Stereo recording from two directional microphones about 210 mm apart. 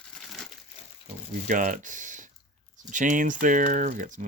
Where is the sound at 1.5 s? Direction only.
40° right (ahead or behind).